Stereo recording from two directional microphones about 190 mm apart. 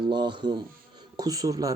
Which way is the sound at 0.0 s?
25° right (ahead or behind).